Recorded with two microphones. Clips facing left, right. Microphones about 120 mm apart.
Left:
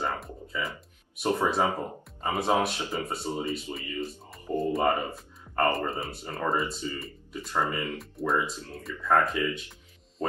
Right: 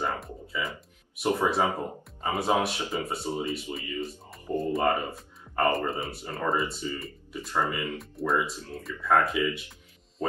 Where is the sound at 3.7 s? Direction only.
15° left (ahead or behind).